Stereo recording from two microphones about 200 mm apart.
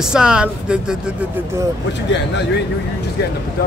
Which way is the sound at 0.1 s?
5° right (ahead or behind).